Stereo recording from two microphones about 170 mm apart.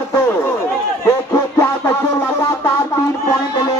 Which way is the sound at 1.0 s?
15° left (ahead or behind).